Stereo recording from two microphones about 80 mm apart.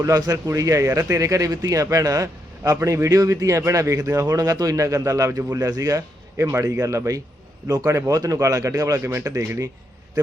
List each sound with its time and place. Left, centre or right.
0.0 s speech: right
6.3 s speech: right
9.0 s speech: right